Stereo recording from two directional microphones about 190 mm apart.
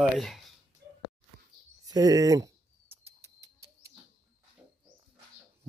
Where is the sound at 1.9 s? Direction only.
20° right (ahead or behind).